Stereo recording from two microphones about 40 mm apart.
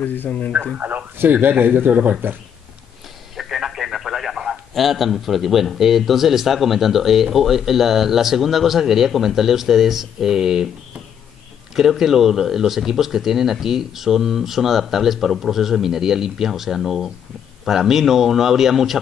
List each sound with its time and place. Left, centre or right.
0.0 s speech: left
0.7 s speech: right
1.9 s speech: right
3.3 s speech: centre
11.7 s speech: centre